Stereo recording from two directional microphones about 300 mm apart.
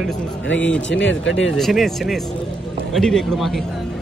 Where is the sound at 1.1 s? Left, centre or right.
Left.